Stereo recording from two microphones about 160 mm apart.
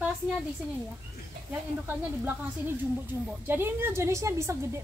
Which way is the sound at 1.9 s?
15° right (ahead or behind).